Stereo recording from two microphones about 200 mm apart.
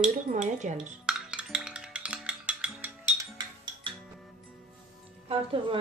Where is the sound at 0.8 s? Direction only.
5° right (ahead or behind).